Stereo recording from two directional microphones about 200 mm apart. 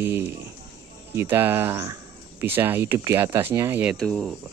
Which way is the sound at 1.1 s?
10° right (ahead or behind).